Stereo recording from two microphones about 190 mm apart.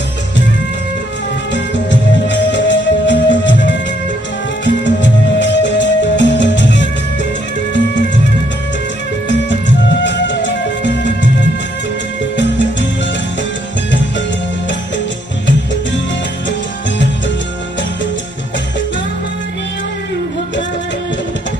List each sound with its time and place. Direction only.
1.5 s music: 70° left (ahead or behind)
10.0 s music: 70° left (ahead or behind)
12.4 s music: 70° left (ahead or behind)